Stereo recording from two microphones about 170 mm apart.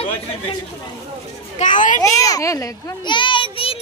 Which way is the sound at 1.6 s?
50° left (ahead or behind).